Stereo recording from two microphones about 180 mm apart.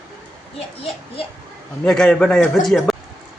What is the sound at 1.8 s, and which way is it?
A man's voice, 5° left (ahead or behind).